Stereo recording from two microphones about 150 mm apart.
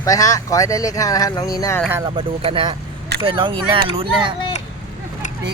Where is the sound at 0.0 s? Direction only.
20° left (ahead or behind).